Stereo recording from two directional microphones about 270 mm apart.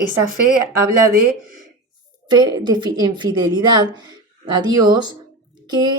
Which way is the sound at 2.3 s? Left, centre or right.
Centre.